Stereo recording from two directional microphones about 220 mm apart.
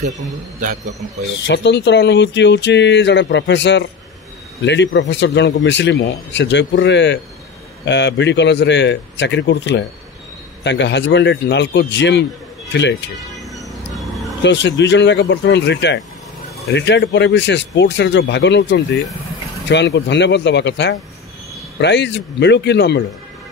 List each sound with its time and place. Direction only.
0.6 s a man's voice: 35° right (ahead or behind)
1.5 s speech: 50° left (ahead or behind)
13.9 s a sound: centre (ahead or behind)
14.4 s speech: 55° left (ahead or behind)